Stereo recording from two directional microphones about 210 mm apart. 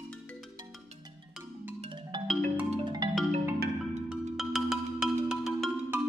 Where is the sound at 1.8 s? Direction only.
20° right (ahead or behind).